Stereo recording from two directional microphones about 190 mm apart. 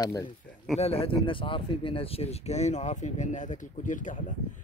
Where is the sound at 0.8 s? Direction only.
30° left (ahead or behind).